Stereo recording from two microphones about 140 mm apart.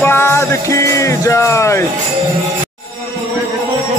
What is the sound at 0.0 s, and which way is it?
Music, 15° left (ahead or behind).